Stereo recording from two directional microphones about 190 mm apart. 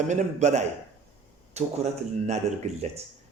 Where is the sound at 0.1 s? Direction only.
40° right (ahead or behind).